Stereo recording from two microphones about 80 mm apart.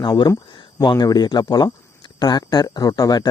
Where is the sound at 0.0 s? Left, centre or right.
Left.